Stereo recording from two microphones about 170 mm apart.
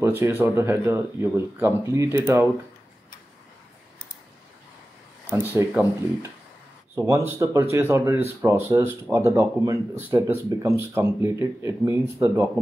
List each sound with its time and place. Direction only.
0.0 s speech: 15° right (ahead or behind)
5.3 s speech: 10° right (ahead or behind)